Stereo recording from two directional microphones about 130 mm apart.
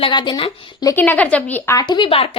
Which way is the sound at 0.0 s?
35° left (ahead or behind).